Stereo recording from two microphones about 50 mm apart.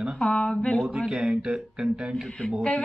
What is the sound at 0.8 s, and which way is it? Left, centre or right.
Speech, centre.